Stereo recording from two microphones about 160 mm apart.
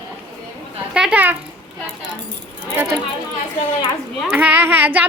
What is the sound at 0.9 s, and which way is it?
Speech, 10° right (ahead or behind).